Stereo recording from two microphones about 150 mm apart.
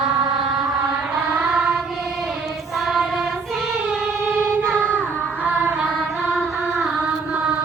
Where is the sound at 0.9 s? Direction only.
5° right (ahead or behind).